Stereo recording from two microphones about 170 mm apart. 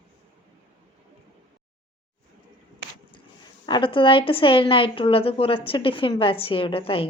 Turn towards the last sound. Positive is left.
turn(degrees=30)  # may be behind; listen again after turning